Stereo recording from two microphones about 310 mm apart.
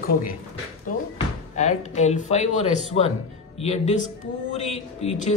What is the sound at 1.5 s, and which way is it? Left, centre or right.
Speech, left.